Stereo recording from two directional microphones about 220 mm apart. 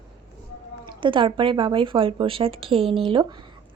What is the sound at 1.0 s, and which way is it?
A woman's voice, 25° right (ahead or behind).